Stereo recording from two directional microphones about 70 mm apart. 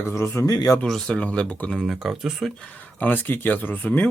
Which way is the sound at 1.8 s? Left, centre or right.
Centre.